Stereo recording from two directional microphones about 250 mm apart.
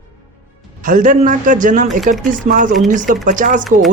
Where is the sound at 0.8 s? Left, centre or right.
Right.